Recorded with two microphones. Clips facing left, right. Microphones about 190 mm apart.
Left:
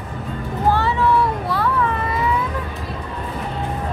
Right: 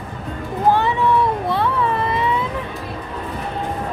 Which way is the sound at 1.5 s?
25° right (ahead or behind).